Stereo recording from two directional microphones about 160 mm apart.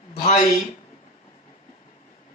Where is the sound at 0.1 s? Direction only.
45° left (ahead or behind).